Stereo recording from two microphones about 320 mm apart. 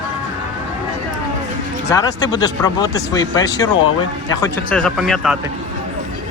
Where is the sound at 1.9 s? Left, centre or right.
Centre.